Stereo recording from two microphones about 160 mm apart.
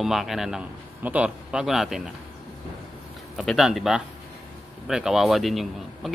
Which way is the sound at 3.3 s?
Centre (ahead or behind).